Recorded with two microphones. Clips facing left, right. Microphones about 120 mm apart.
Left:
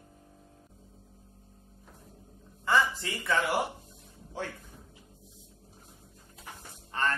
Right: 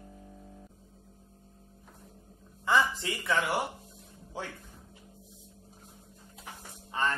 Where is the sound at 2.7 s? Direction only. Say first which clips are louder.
Even; 20° right (ahead or behind).